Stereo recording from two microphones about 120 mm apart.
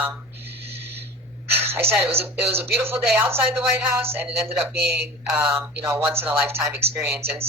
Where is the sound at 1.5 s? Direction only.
20° right (ahead or behind).